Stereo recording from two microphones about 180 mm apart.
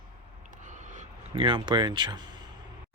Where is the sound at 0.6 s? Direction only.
40° right (ahead or behind).